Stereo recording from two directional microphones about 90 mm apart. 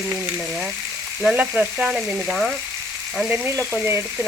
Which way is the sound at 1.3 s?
15° right (ahead or behind).